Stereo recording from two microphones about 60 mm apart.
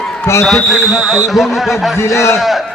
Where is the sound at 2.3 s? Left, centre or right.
Centre.